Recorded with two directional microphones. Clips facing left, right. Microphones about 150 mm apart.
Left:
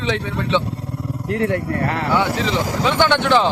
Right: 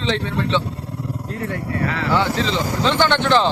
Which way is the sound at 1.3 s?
70° left (ahead or behind).